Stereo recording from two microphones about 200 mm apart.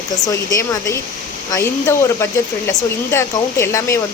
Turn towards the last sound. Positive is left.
turn(degrees=15)  # may be behind; listen again after turning